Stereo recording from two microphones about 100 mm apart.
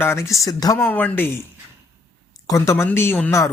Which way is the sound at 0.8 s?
15° left (ahead or behind).